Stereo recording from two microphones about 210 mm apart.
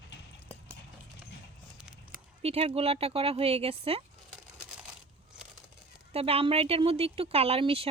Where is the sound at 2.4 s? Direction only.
30° right (ahead or behind).